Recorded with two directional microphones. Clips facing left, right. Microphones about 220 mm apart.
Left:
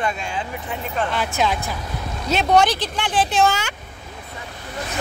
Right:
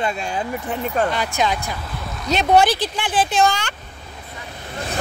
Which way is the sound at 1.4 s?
Centre (ahead or behind).